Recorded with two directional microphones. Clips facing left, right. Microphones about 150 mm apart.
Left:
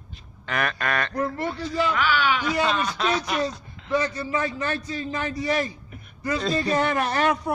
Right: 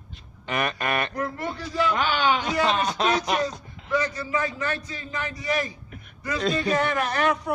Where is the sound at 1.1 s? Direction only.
30° left (ahead or behind).